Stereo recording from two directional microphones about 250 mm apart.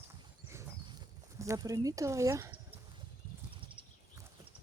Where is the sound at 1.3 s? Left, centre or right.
Centre.